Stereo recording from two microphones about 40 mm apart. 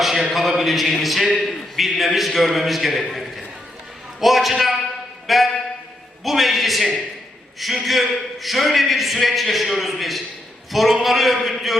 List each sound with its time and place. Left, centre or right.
0.0 s a sound: centre
1.0 s speech: centre
5.2 s music: centre
6.2 s speech: centre